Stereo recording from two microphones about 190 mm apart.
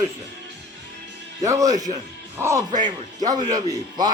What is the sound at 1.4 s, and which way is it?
Speech, 15° right (ahead or behind).